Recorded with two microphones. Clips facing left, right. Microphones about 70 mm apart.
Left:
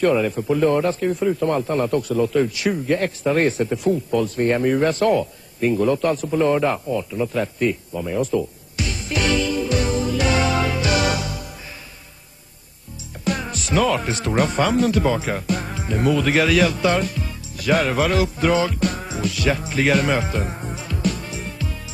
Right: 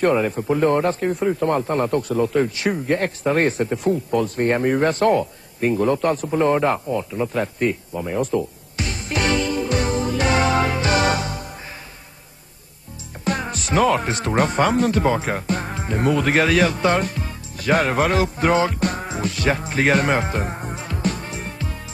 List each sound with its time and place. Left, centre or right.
0.0 s speech: right
8.2 s music: right
13.2 s speech: right